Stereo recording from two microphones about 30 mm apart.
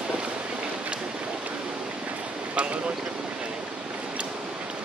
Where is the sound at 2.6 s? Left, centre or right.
Right.